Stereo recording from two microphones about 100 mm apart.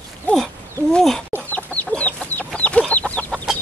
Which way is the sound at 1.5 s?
15° left (ahead or behind).